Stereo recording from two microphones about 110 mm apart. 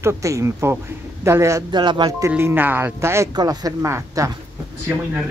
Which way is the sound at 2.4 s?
20° right (ahead or behind).